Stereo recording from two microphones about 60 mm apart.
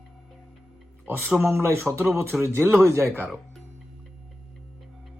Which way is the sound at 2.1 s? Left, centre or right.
Right.